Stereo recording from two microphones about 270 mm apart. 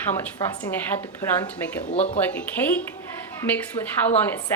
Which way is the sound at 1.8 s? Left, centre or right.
Left.